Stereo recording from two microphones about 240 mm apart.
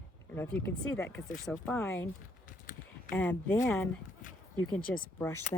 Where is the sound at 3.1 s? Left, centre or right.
Centre.